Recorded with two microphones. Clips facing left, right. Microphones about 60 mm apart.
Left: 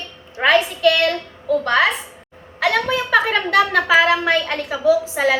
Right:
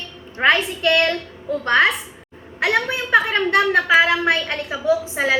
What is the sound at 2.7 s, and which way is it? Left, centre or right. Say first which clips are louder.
Speech: left 1 dB; centre.